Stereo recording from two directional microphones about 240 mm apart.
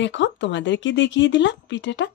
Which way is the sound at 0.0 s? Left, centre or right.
Left.